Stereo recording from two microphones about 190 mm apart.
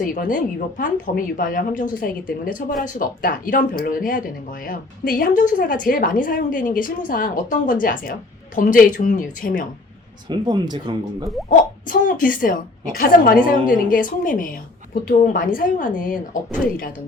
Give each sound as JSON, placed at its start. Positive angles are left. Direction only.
{"t": 0.0, "sound": "a woman's voice", "side_deg": 45}
{"t": 10.2, "sound": "speech", "side_deg": -25}
{"t": 11.4, "sound": "a woman's voice", "side_deg": 45}